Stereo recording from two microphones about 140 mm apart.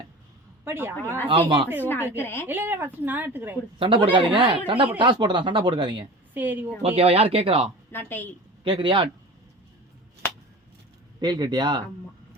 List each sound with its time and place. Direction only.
0.6 s a woman's voice: 15° right (ahead or behind)
1.3 s speech: 35° right (ahead or behind)
1.8 s a woman's voice: 15° left (ahead or behind)
2.5 s a woman's voice: 15° right (ahead or behind)
3.8 s speech: 40° right (ahead or behind)
6.3 s a woman's voice: 15° right (ahead or behind)
6.8 s speech: 45° right (ahead or behind)
7.9 s a woman's voice: 15° left (ahead or behind)
8.6 s speech: 40° right (ahead or behind)
11.2 s speech: 30° right (ahead or behind)